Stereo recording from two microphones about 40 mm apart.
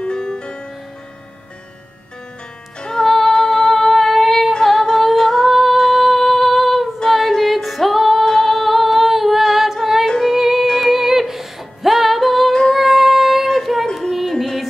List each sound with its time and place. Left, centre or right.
0.0 s music: centre
2.8 s female singing: centre
4.6 s humming: centre
5.5 s female singing: centre
8.3 s humming: centre
10.0 s music: centre
10.3 s music: centre
12.7 s child singing: centre
14.3 s music: centre